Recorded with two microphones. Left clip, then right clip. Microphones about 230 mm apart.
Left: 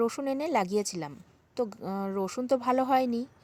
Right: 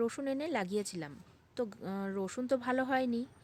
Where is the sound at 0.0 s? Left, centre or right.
Centre.